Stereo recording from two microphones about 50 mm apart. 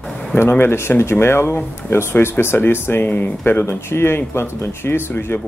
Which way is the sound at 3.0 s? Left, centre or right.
Left.